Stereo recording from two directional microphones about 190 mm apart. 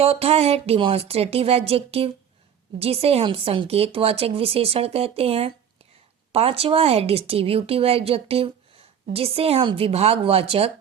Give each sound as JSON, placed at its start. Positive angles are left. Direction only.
{"t": 0.0, "sound": "speech", "side_deg": -30}